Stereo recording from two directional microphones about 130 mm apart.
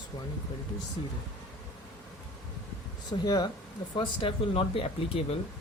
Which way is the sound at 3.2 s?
30° left (ahead or behind).